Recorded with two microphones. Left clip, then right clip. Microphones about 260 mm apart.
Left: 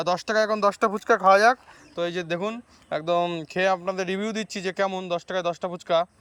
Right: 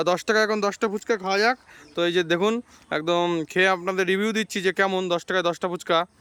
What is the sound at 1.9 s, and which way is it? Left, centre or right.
Speech, centre.